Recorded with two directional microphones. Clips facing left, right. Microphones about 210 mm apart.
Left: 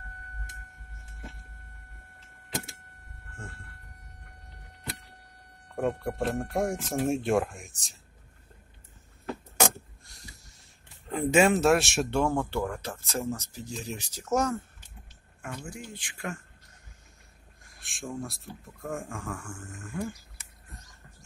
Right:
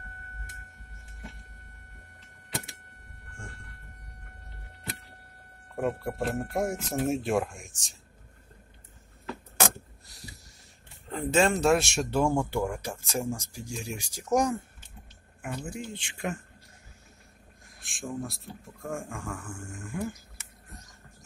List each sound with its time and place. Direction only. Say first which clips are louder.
5.8 s speech: left 1 dB; centre (ahead or behind)
11.1 s speech: left 2 dB; 10° left (ahead or behind); by 14.6 s 15° right (ahead or behind)
15.4 s speech: right 4 dB; 25° right (ahead or behind)
17.6 s speech: right 1 dB; centre (ahead or behind)